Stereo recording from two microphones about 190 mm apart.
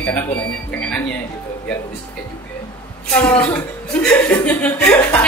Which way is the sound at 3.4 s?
5° left (ahead or behind).